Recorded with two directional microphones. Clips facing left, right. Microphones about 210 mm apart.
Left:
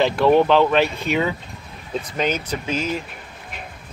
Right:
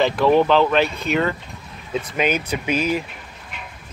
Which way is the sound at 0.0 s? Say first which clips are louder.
Even; centre (ahead or behind).